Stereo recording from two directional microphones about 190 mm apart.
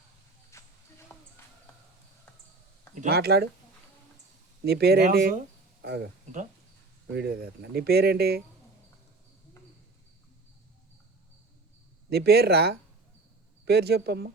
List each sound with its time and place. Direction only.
0.5 s a sound: 15° left (ahead or behind)
2.9 s speech: 50° right (ahead or behind)
4.6 s speech: 55° right (ahead or behind)
7.1 s speech: 55° right (ahead or behind)
12.1 s speech: 55° right (ahead or behind)